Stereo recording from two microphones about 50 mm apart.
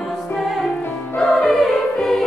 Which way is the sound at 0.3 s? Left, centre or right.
Centre.